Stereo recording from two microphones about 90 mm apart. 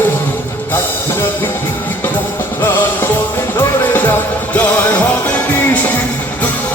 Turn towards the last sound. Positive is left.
turn(degrees=20)  # may be behind; listen again after turning